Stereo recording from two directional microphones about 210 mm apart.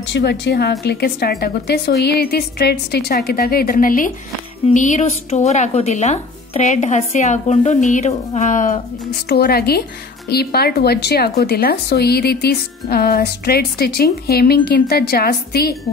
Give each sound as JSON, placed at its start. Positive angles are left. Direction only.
{"t": 0.1, "sound": "speech", "side_deg": 50}
{"t": 9.3, "sound": "speech", "side_deg": 50}